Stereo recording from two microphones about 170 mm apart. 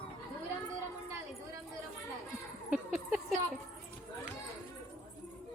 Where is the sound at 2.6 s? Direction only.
5° right (ahead or behind).